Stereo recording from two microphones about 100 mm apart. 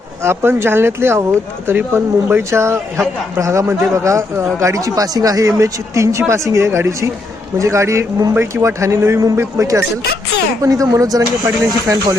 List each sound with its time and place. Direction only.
0.2 s a man's voice: 25° right (ahead or behind)